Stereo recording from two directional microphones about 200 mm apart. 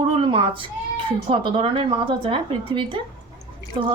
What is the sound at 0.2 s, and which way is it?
Speech, 25° right (ahead or behind).